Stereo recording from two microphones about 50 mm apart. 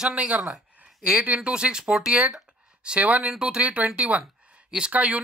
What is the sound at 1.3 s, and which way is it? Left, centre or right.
Speech, centre.